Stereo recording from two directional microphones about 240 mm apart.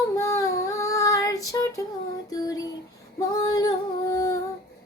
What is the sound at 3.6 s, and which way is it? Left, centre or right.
Music, centre.